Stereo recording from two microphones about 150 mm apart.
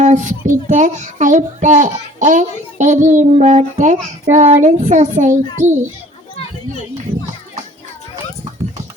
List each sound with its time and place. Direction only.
0.0 s a child's voice: 55° right (ahead or behind)